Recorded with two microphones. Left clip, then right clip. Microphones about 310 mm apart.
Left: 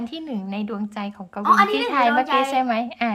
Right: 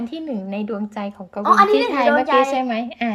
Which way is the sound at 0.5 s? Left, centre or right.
Centre.